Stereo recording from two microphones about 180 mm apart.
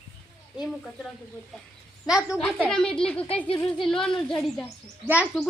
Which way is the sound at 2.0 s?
5° right (ahead or behind).